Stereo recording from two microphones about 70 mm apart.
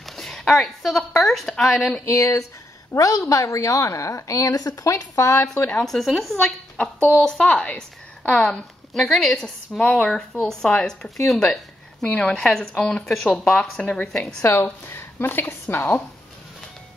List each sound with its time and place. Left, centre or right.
0.0 s speech: centre
2.0 s a woman's voice: left
5.8 s a woman's voice: centre
14.4 s a woman's voice: left